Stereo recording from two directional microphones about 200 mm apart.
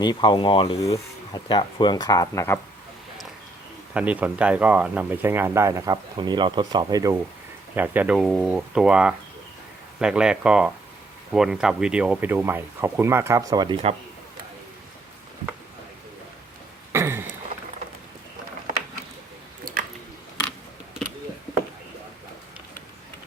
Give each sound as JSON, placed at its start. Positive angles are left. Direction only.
{"t": 0.0, "sound": "speech", "side_deg": 20}
{"t": 3.9, "sound": "speech", "side_deg": -5}
{"t": 7.8, "sound": "speech", "side_deg": -5}
{"t": 16.9, "sound": "a sound", "side_deg": -10}